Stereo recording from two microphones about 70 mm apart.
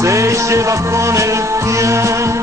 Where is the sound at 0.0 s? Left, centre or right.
Right.